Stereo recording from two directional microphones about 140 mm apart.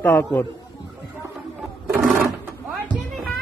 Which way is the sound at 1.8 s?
5° right (ahead or behind).